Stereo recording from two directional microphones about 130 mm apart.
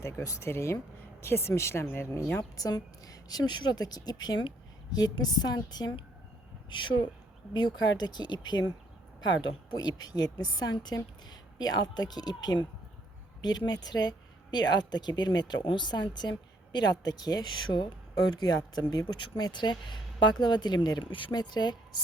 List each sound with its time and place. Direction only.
0.0 s speech: 25° left (ahead or behind)
2.4 s a woman's voice: 30° left (ahead or behind)